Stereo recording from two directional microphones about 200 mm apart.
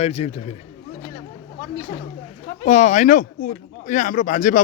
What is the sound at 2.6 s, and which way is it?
Speech, 35° left (ahead or behind).